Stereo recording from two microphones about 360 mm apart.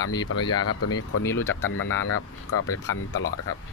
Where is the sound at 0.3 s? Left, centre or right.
Left.